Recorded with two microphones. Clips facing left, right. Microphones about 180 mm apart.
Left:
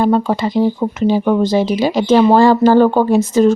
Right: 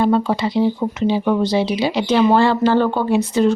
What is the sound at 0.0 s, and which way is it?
Speech, 45° left (ahead or behind).